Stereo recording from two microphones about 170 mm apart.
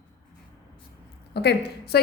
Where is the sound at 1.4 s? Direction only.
75° left (ahead or behind).